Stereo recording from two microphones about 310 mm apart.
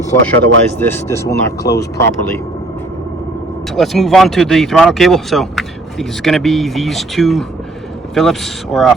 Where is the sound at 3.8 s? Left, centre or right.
Centre.